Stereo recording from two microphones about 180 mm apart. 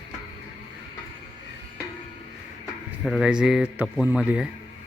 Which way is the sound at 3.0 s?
Centre (ahead or behind).